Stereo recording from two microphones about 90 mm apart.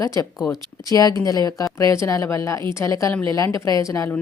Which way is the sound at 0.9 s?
40° left (ahead or behind).